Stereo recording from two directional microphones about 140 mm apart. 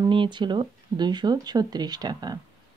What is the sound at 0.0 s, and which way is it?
Speech, 35° right (ahead or behind).